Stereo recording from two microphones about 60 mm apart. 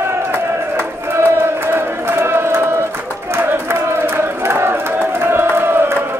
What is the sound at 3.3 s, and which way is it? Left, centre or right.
Crowd, right.